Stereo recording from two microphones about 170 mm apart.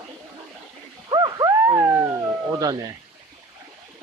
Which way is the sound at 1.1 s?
25° right (ahead or behind).